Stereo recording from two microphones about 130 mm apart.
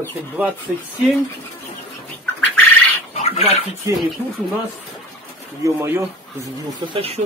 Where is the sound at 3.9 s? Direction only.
25° right (ahead or behind).